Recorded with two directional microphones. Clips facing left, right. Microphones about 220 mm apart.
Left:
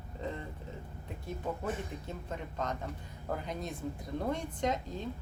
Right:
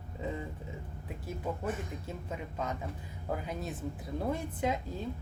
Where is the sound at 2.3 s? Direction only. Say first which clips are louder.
Even; 5° right (ahead or behind).